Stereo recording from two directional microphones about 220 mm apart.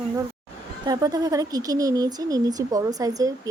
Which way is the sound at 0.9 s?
15° right (ahead or behind).